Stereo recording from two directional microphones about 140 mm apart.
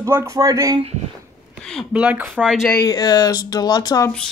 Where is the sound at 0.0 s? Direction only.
20° right (ahead or behind).